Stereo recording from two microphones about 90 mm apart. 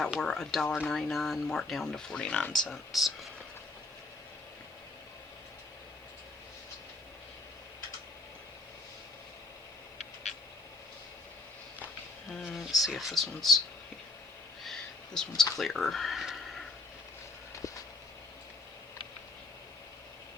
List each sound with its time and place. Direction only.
0.2 s speech: 5° left (ahead or behind)
2.9 s speech: centre (ahead or behind)
12.3 s speech: centre (ahead or behind)
14.6 s a sound: 5° left (ahead or behind)
15.5 s speech: centre (ahead or behind)